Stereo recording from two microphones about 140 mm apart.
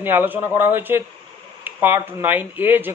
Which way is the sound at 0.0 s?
15° right (ahead or behind).